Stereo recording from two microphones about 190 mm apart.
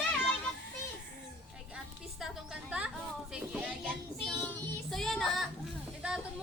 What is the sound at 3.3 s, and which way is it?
Child singing, 5° right (ahead or behind).